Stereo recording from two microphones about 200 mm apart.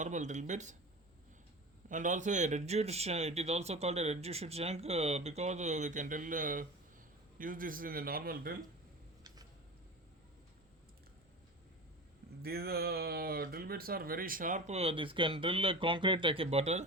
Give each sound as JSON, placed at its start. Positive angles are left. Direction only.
{"t": 0.0, "sound": "speech", "side_deg": -35}
{"t": 1.9, "sound": "a man's voice", "side_deg": -40}
{"t": 12.4, "sound": "speech", "side_deg": -50}